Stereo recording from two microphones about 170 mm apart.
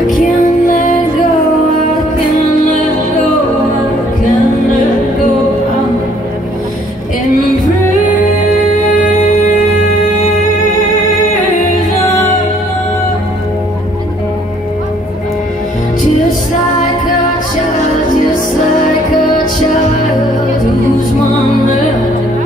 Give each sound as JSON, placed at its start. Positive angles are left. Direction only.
{"t": 0.2, "sound": "music", "side_deg": 50}